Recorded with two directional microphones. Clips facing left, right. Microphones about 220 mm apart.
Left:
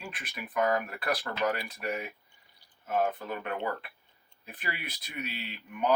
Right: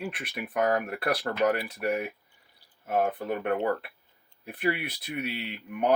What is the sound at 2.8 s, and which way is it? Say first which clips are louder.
Speech: right 3 dB; 55° right (ahead or behind).